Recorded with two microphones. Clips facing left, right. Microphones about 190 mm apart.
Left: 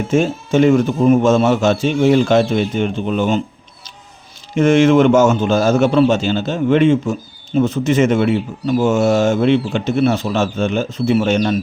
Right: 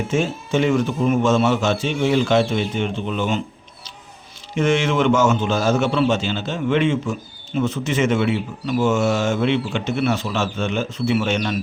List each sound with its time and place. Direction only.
0.1 s a man's voice: 45° left (ahead or behind)
4.5 s a man's voice: 45° left (ahead or behind)